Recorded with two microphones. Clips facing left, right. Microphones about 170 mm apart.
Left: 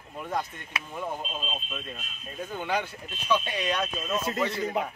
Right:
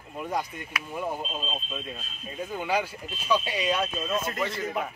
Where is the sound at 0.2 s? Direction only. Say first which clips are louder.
Right 1 dB; 10° right (ahead or behind).